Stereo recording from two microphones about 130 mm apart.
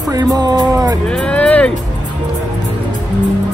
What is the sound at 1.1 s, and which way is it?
Vehicle, 5° left (ahead or behind).